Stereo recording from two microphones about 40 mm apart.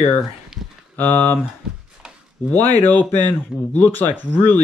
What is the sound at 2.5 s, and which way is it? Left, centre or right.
Speech, left.